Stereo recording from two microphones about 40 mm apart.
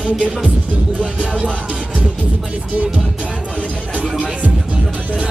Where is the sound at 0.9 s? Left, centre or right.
Right.